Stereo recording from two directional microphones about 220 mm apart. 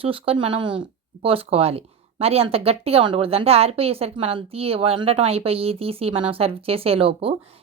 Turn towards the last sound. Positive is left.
turn(degrees=-25)  # may be behind; listen again after turning